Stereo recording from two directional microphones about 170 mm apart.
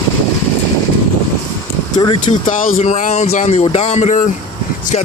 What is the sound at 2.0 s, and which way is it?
Speech, 30° left (ahead or behind).